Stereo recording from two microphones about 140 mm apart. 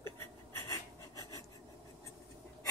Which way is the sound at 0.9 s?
30° right (ahead or behind).